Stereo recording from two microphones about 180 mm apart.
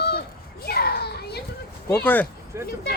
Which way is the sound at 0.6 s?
60° left (ahead or behind).